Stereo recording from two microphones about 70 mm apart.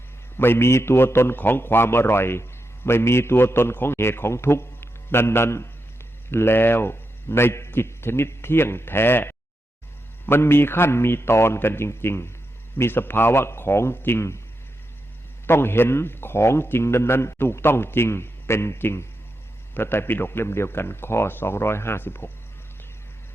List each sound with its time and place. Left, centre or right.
0.3 s a man's voice: left
15.4 s a man's voice: left